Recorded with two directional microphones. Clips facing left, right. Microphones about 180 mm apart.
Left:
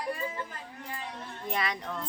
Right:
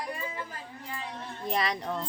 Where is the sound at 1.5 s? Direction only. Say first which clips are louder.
Right 3 dB; 35° right (ahead or behind).